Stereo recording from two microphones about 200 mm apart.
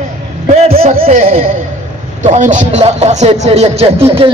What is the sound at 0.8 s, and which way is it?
Speech, 30° right (ahead or behind).